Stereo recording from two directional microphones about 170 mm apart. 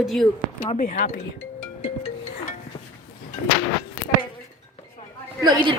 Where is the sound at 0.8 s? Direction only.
50° left (ahead or behind).